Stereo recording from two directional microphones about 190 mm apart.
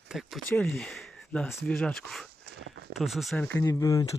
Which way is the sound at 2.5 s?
60° right (ahead or behind).